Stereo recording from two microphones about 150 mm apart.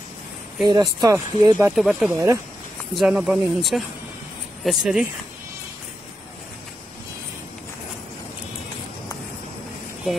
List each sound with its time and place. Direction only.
0.7 s speech: 25° right (ahead or behind)
1.8 s speech: 5° right (ahead or behind)
2.1 s speech: 20° right (ahead or behind)
2.9 s speech: 5° right (ahead or behind)